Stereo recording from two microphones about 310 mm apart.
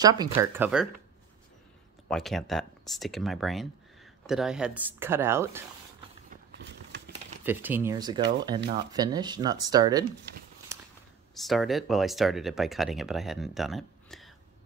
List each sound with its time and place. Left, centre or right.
0.0 s speech: centre
2.0 s speech: centre
6.5 s a sound: right
7.4 s speech: centre
8.2 s speech: right
8.9 s speech: centre
11.3 s speech: centre